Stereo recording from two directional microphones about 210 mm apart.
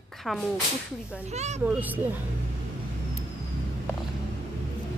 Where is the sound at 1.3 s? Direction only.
30° right (ahead or behind).